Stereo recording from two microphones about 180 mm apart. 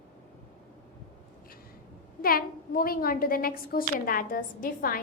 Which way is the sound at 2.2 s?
55° left (ahead or behind).